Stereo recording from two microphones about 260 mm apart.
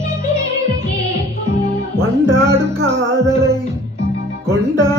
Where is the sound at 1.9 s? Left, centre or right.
Centre.